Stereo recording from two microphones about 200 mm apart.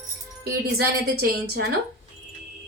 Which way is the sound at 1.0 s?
50° right (ahead or behind).